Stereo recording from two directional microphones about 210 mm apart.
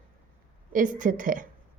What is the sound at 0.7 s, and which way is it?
Speech, 40° right (ahead or behind).